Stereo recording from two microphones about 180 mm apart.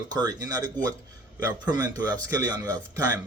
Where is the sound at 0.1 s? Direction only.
20° right (ahead or behind).